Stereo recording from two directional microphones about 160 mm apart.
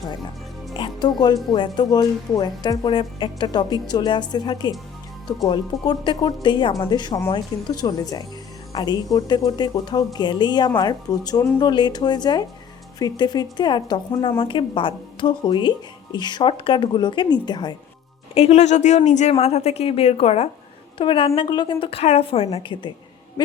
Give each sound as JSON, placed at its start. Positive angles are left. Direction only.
{"t": 0.7, "sound": "speech", "side_deg": 25}
{"t": 5.8, "sound": "speech", "side_deg": 25}
{"t": 18.3, "sound": "speech", "side_deg": 40}